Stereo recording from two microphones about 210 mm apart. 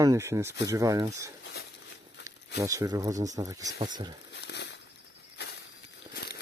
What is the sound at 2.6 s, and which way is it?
Speech, 15° right (ahead or behind).